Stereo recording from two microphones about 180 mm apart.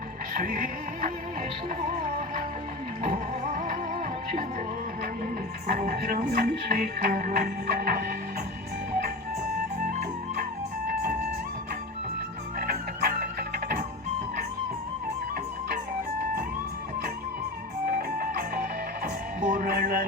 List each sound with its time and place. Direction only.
0.3 s music: 50° right (ahead or behind)
3.1 s music: 50° right (ahead or behind)
5.2 s speech: 50° right (ahead or behind)
9.8 s music: 50° right (ahead or behind)
12.5 s music: 55° right (ahead or behind)
17.8 s music: 55° right (ahead or behind)